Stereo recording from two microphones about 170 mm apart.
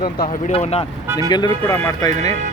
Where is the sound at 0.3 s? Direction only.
40° left (ahead or behind).